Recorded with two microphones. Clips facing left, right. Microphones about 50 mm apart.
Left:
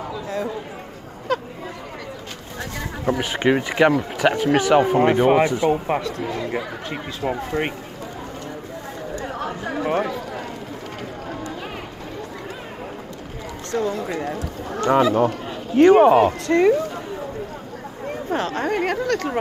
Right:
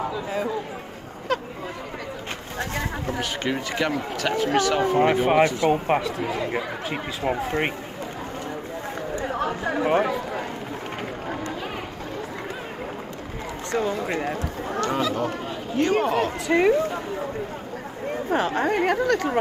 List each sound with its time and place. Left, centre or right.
0.0 s a sound: centre
1.3 s a sound: centre
3.1 s speech: left
4.9 s speech: centre
5.4 s speech: centre
5.9 s speech: centre
9.2 s chatter: centre
10.0 s speech: centre
13.7 s speech: right
14.8 s speech: left
16.4 s speech: centre
18.3 s speech: centre